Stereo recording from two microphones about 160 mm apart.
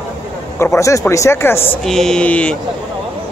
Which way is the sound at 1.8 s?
5° left (ahead or behind).